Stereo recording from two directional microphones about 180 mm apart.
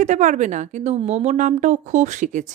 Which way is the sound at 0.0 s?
45° right (ahead or behind).